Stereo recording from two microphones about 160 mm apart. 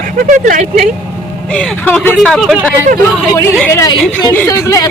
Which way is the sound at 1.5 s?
5° left (ahead or behind).